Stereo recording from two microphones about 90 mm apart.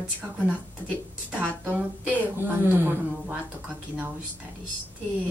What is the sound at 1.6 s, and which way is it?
Speech, 20° right (ahead or behind).